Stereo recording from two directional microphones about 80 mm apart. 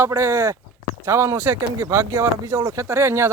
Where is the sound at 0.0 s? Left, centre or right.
Right.